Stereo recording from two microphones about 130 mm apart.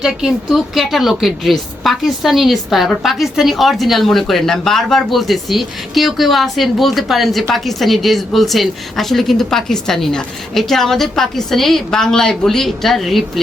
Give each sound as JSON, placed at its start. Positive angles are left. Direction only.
{"t": 0.0, "sound": "a woman's voice", "side_deg": -5}